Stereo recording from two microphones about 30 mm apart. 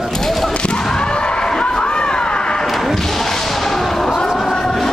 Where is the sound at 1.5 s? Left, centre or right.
Left.